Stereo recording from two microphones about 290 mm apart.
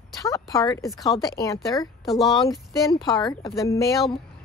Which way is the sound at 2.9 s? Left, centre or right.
Centre.